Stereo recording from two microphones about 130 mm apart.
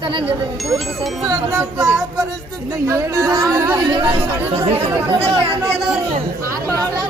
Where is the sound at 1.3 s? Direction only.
25° right (ahead or behind).